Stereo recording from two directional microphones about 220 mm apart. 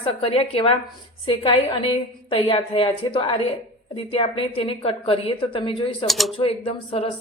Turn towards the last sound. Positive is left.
turn(degrees=25)  # may be behind; listen again after turning